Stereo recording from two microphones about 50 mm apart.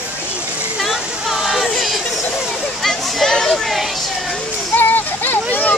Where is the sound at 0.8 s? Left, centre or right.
Centre.